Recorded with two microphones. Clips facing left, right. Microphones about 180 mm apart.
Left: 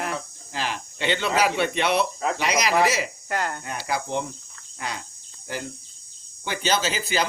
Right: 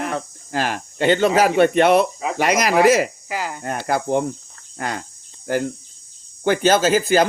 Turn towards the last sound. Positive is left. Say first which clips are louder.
# right 10 dB
turn(degrees=-50)  # may be behind; listen again after turning